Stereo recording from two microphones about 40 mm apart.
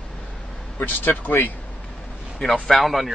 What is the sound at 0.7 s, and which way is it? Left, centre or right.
Speech, left.